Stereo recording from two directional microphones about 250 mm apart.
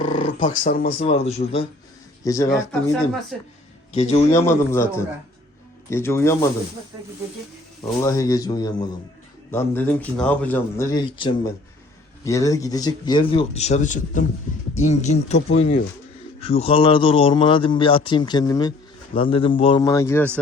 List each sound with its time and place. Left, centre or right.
0.2 s a sound: left
0.6 s speech: left
1.0 s a man's voice: left
2.2 s speech: centre
2.9 s speech: centre
3.9 s a man's voice: left
4.3 s speech: centre
7.9 s a man's voice: centre